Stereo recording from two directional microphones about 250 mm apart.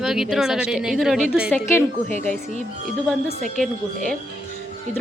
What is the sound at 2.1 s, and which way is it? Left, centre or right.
Speech, right.